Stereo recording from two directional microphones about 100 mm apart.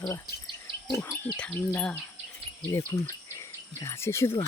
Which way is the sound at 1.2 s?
20° left (ahead or behind).